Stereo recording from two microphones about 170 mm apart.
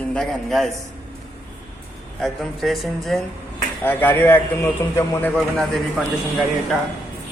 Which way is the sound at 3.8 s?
10° left (ahead or behind).